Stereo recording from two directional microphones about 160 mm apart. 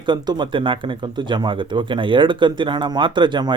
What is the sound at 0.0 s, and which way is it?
Speech, 30° right (ahead or behind).